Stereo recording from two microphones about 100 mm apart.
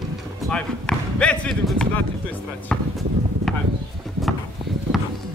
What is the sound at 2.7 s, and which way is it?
Speech, 5° left (ahead or behind).